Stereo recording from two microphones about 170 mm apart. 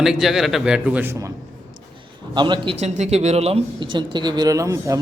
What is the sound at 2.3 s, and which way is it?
Speech, 25° right (ahead or behind).